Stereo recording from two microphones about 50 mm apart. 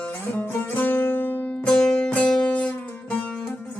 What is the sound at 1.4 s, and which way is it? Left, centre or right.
Music, centre.